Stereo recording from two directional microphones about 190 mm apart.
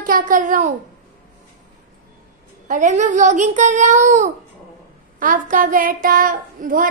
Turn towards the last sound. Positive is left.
turn(degrees=-45)  # may be behind; listen again after turning